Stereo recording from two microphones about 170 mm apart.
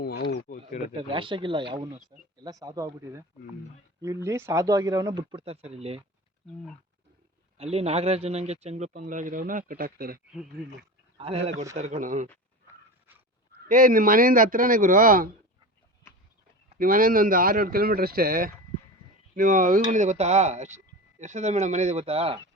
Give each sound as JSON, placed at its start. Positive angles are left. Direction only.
{"t": 0.0, "sound": "a sound", "side_deg": 80}
{"t": 0.4, "sound": "speech", "side_deg": 55}
{"t": 0.9, "sound": "speech", "side_deg": -30}
{"t": 7.6, "sound": "speech", "side_deg": -35}
{"t": 8.9, "sound": "speech", "side_deg": -50}
{"t": 11.2, "sound": "speech", "side_deg": -35}
{"t": 13.7, "sound": "speech", "side_deg": -50}
{"t": 16.7, "sound": "speech", "side_deg": -55}